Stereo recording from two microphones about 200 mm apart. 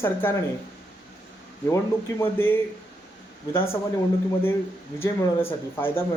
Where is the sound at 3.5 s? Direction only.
10° left (ahead or behind).